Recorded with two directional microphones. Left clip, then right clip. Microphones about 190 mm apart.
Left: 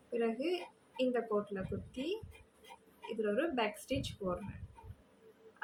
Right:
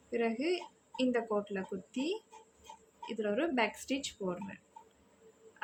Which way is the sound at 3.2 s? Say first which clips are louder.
Right 2 dB; 40° right (ahead or behind).